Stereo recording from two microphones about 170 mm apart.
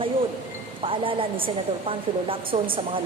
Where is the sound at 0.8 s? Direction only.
30° right (ahead or behind).